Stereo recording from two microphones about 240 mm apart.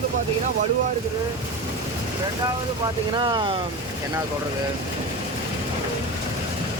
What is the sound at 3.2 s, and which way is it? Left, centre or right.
Speech, centre.